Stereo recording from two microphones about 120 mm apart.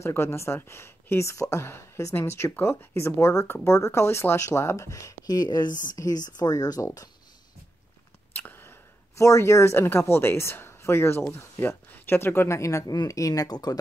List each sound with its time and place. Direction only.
0.0 s speech: 20° left (ahead or behind)
8.3 s speech: 15° left (ahead or behind); by 13.7 s 35° left (ahead or behind)